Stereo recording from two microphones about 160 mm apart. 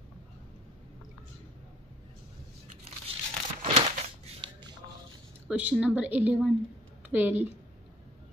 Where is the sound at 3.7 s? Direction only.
35° right (ahead or behind).